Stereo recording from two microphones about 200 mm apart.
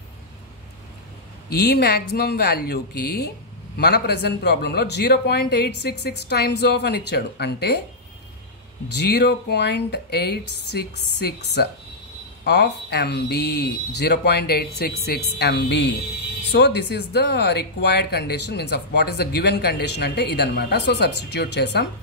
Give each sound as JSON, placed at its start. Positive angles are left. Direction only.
{"t": 1.5, "sound": "speech", "side_deg": 55}
{"t": 9.0, "sound": "speech", "side_deg": 55}